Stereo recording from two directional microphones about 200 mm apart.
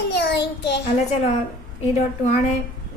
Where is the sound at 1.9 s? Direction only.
35° left (ahead or behind).